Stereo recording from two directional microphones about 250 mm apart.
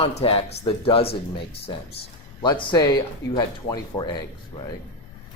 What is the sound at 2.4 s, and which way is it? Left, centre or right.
Speech, centre.